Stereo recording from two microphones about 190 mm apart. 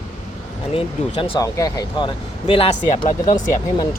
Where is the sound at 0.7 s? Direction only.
25° left (ahead or behind).